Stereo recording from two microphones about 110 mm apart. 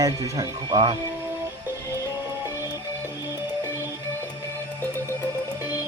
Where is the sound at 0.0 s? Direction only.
35° right (ahead or behind).